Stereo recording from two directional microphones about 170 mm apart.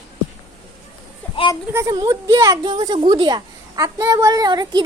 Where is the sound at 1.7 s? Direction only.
20° right (ahead or behind).